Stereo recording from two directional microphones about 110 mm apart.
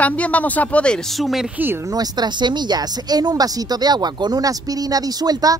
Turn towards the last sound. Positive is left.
turn(degrees=-35)  # may be behind; listen again after turning